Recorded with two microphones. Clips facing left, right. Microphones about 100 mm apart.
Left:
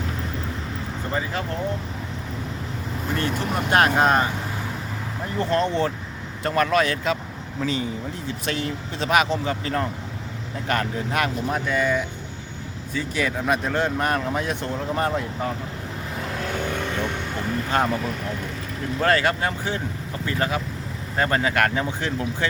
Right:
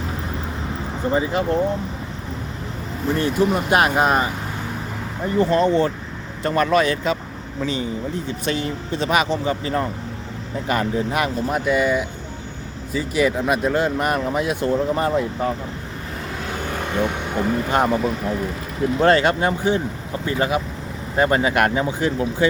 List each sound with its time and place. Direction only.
1.1 s speech: 20° right (ahead or behind)
3.2 s speech: 5° right (ahead or behind)
5.4 s speech: 5° right (ahead or behind)
16.5 s vehicle: 5° right (ahead or behind)
18.9 s speech: 25° right (ahead or behind); by 22.4 s 10° right (ahead or behind)